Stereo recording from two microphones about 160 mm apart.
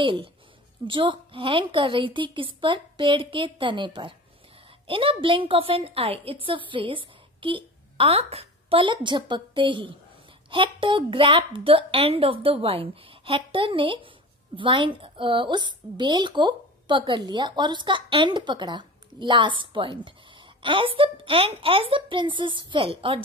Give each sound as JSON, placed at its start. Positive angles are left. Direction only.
{"t": 0.0, "sound": "a woman's voice", "side_deg": -30}